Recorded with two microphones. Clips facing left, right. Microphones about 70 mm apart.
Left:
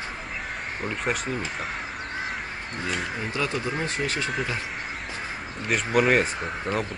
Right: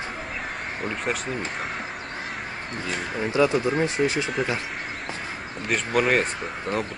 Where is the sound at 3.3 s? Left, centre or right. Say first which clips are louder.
Right 8 dB; centre.